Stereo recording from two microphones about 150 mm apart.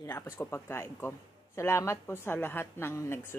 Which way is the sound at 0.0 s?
15° left (ahead or behind).